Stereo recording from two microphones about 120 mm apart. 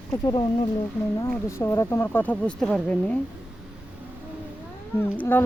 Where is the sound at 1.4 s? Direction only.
25° left (ahead or behind); by 3.1 s 10° left (ahead or behind).